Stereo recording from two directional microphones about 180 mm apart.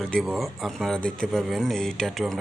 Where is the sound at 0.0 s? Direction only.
Centre (ahead or behind).